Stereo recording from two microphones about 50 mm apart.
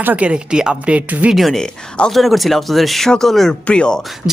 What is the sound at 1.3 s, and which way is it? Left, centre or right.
Speech, centre.